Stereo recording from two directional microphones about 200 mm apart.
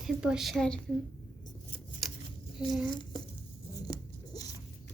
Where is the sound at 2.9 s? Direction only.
20° left (ahead or behind).